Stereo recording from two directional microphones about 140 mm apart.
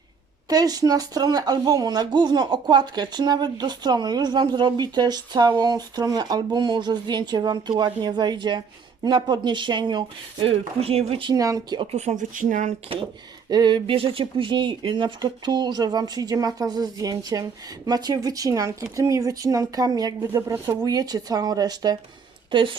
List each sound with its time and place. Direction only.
0.4 s speech: 25° right (ahead or behind)
11.8 s speech: 50° right (ahead or behind); by 12.7 s 70° right (ahead or behind)
13.5 s speech: 30° right (ahead or behind)